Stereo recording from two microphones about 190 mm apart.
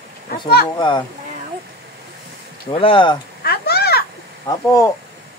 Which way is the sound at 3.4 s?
55° left (ahead or behind).